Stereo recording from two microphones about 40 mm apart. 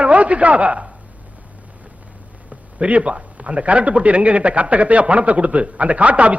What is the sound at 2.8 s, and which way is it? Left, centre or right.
A man's voice, right.